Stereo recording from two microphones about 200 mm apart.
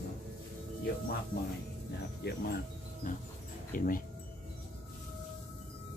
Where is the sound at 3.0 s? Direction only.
40° left (ahead or behind).